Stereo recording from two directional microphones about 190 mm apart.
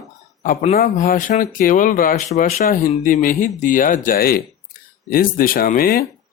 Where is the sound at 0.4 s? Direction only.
40° left (ahead or behind).